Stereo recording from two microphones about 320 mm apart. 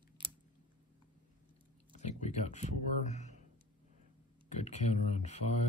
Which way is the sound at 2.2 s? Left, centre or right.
Left.